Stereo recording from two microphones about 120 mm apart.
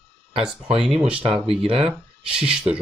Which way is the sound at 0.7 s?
5° right (ahead or behind).